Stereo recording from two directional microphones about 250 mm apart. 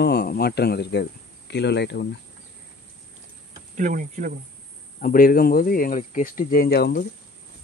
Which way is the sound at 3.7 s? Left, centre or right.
Right.